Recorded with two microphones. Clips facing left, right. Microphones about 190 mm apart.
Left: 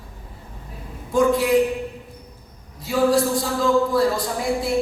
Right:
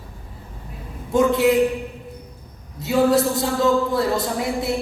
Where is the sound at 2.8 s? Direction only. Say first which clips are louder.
Right 1 dB; 25° right (ahead or behind).